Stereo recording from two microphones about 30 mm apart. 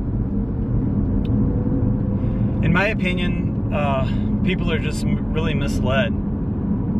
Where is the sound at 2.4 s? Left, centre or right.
Centre.